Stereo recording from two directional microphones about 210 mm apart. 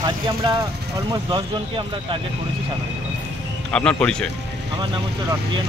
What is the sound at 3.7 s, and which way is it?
Speech, 5° left (ahead or behind).